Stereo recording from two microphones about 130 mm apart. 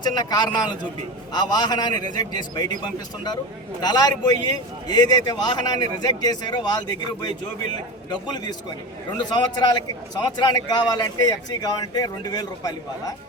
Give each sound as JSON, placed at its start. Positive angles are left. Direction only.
{"t": 0.0, "sound": "a man's voice", "side_deg": 30}
{"t": 3.8, "sound": "a man's voice", "side_deg": 30}